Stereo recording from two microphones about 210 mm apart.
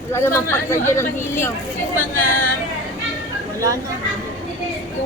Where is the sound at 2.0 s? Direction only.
40° left (ahead or behind).